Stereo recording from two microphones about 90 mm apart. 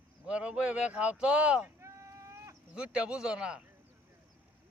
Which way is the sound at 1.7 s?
35° right (ahead or behind).